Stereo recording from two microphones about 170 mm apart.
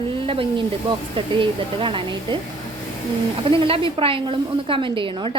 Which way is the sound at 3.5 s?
30° right (ahead or behind).